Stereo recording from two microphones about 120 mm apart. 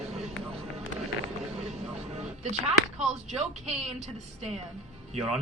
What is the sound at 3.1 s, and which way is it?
Speech, 70° right (ahead or behind).